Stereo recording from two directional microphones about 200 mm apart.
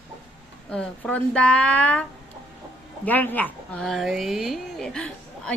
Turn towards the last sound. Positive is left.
turn(degrees=5)  # may be behind; listen again after turning